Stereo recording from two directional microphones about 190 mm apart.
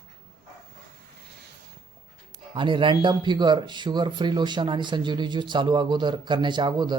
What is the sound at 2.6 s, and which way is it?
Speech, 25° right (ahead or behind).